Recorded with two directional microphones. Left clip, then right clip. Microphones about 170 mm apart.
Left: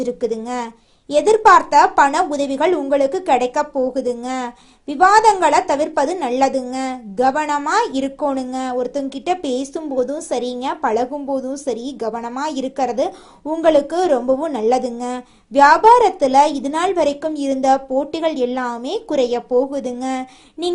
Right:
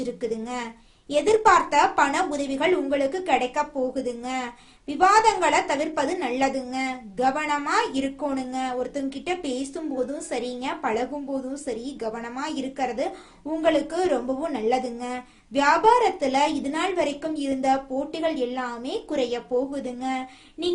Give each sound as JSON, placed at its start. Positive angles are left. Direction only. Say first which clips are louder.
{"t": 0.0, "sound": "a woman's voice", "louder": "left 8 dB", "side_deg": 35}